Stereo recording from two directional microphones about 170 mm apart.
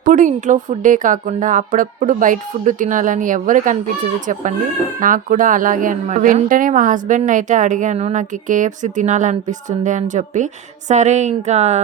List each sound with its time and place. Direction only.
0.0 s a woman's voice: 50° right (ahead or behind)